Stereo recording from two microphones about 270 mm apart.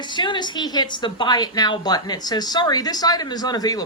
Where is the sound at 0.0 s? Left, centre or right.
Centre.